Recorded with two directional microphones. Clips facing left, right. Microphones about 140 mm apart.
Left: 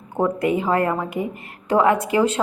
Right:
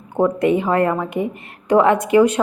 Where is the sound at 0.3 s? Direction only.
20° right (ahead or behind).